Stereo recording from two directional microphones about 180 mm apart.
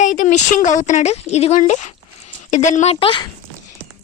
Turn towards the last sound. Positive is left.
turn(degrees=30)  # may be behind; listen again after turning